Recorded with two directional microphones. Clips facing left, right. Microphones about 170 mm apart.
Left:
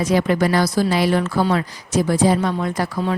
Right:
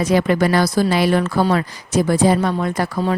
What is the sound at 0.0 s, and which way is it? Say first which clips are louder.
A woman's voice: right 2 dB; 65° right (ahead or behind).